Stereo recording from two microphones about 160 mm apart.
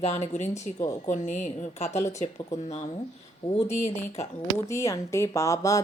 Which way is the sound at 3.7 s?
45° left (ahead or behind).